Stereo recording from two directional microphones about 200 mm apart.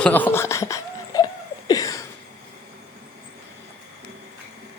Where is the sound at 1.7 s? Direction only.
15° left (ahead or behind).